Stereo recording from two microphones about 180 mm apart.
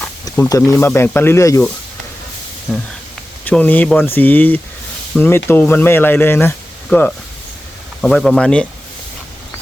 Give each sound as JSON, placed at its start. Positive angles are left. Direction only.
{"t": 0.3, "sound": "speech", "side_deg": 20}
{"t": 2.7, "sound": "speech", "side_deg": 0}